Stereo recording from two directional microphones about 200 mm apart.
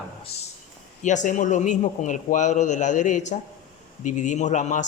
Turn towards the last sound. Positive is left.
turn(degrees=35)  # may be behind; listen again after turning